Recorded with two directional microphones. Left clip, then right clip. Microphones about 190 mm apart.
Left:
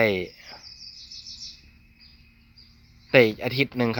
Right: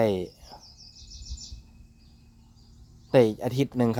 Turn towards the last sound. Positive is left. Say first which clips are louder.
# left 2 dB
turn(degrees=-25)  # may be behind; listen again after turning